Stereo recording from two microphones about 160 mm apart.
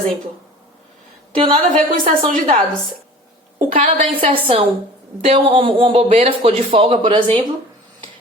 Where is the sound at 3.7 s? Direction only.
40° right (ahead or behind).